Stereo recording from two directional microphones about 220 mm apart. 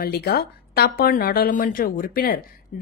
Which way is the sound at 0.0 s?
45° left (ahead or behind).